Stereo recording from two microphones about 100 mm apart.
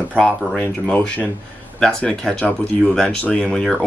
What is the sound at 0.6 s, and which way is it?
Speech, 15° left (ahead or behind).